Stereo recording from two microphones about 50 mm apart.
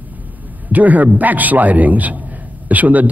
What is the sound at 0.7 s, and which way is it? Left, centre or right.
A man's voice, right.